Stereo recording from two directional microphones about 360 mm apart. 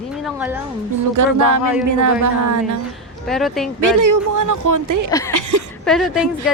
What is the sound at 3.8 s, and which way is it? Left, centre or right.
Speech, right.